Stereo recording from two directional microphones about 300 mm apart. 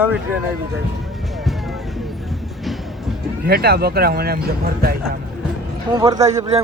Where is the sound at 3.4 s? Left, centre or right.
Right.